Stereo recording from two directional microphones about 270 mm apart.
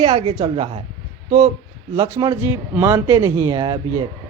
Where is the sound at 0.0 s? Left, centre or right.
Right.